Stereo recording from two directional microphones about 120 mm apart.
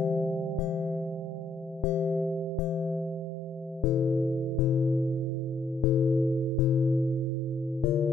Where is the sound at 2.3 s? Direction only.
25° left (ahead or behind).